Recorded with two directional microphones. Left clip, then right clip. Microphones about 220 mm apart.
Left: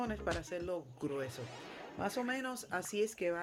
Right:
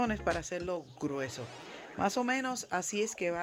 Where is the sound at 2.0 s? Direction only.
35° right (ahead or behind).